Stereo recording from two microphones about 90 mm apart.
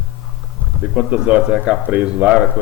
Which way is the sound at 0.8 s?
10° right (ahead or behind).